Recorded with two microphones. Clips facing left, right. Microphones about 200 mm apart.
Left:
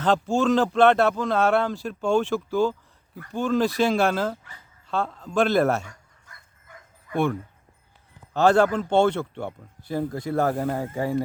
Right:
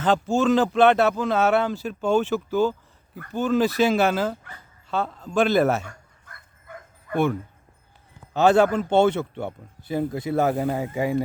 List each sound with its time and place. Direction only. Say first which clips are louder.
0.0 s speech: right 1 dB; centre (ahead or behind)
5.8 s dog: right 4 dB; 55° right (ahead or behind)
8.3 s a man's voice: right 1 dB; 20° right (ahead or behind)
10.5 s speech: right 2 dB; 5° right (ahead or behind)